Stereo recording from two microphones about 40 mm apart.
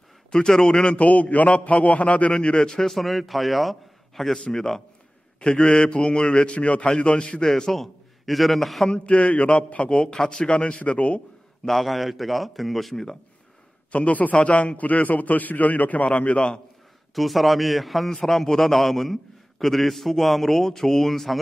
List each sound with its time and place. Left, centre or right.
0.3 s a man's voice: centre
0.9 s a man's voice: left
2.8 s a man's voice: centre
7.7 s a man's voice: centre
8.9 s a man's voice: left
10.1 s a man's voice: centre
10.4 s a man's voice: left
11.6 s a man's voice: centre
13.9 s a man's voice: left
14.8 s a man's voice: left
17.1 s a man's voice: centre